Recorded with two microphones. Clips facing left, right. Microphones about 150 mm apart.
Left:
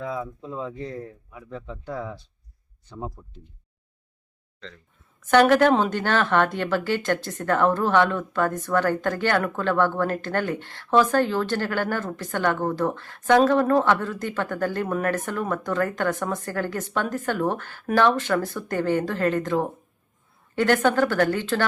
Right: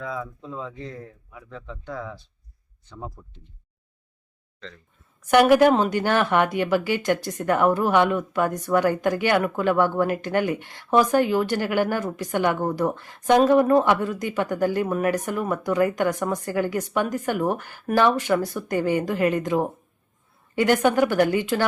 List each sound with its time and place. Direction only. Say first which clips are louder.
0.4 s speech: left 2 dB; 10° left (ahead or behind)
0.7 s a man's voice: left 3 dB; 35° left (ahead or behind)
1.6 s speech: left 1 dB; 10° left (ahead or behind)
5.2 s a woman's voice: right 1 dB; 10° right (ahead or behind)